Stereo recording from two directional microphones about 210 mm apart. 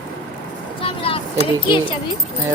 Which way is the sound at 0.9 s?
25° left (ahead or behind).